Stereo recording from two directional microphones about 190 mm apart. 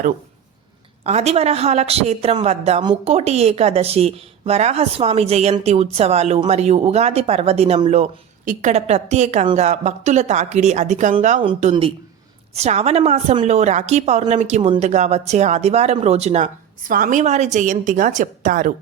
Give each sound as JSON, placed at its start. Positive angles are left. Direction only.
{"t": 1.0, "sound": "a woman's voice", "side_deg": -35}